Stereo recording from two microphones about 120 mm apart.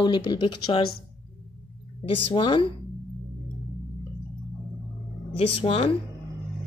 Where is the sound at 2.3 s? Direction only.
45° left (ahead or behind).